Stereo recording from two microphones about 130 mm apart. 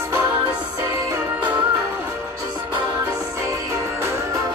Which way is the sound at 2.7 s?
25° right (ahead or behind).